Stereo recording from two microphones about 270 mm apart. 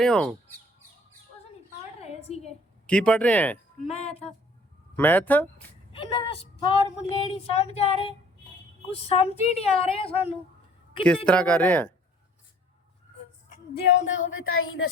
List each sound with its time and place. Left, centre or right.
0.0 s speech: centre
2.0 s a sound: left
2.8 s speech: centre
3.8 s speech: left
4.9 s speech: centre
5.9 s speech: centre
11.3 s speech: centre
13.9 s speech: left